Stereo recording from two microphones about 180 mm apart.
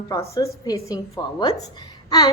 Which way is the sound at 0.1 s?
20° left (ahead or behind).